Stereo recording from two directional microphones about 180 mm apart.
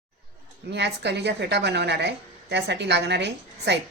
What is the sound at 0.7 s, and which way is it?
A woman's voice, 70° right (ahead or behind).